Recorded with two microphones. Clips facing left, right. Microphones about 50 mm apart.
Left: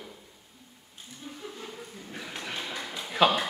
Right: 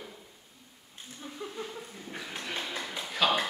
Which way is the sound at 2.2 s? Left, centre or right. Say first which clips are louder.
Even; centre.